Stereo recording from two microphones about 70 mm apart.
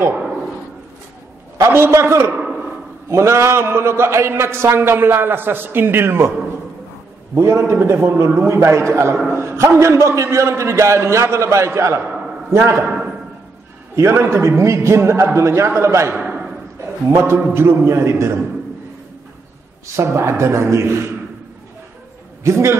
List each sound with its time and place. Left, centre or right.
1.6 s a man's voice: right
2.3 s a sound: centre
3.1 s a man's voice: right
7.3 s a man's voice: right
12.8 s a sound: centre
13.9 s a man's voice: right
16.2 s a sound: right
17.1 s a man's voice: right
20.0 s a man's voice: right
22.4 s a man's voice: right